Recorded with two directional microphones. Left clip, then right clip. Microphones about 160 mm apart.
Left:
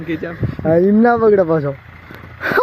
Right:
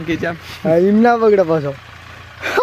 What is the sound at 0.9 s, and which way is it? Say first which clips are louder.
Speech: even; 10° left (ahead or behind).